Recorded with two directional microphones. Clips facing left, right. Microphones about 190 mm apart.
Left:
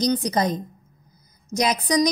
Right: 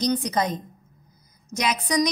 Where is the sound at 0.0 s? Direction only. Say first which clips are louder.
Left 2 dB; 35° left (ahead or behind).